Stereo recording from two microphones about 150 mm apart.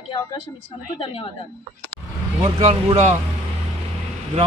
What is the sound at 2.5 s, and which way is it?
Speech, 45° right (ahead or behind).